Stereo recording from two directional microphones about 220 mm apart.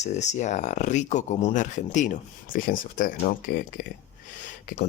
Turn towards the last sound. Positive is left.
turn(degrees=35)  # may be behind; listen again after turning